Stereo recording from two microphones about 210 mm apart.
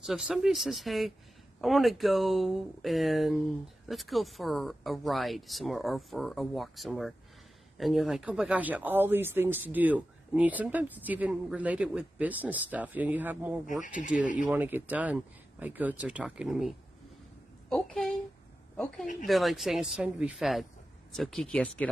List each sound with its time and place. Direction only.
0.0 s speech: centre (ahead or behind)
13.8 s speech: 40° left (ahead or behind)
14.4 s a woman's voice: 10° right (ahead or behind)
19.2 s speech: centre (ahead or behind)